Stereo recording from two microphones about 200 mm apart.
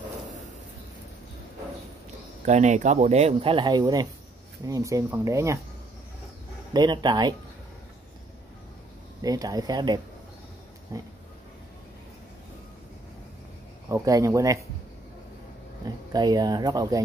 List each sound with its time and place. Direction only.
2.4 s speech: 35° right (ahead or behind); by 5.6 s 15° right (ahead or behind)
6.7 s speech: 20° right (ahead or behind)
9.2 s speech: 20° right (ahead or behind)
13.8 s speech: 15° right (ahead or behind)
16.1 s speech: 20° right (ahead or behind)